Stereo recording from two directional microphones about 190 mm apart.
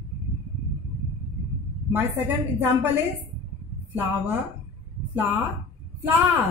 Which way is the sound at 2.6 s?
10° right (ahead or behind).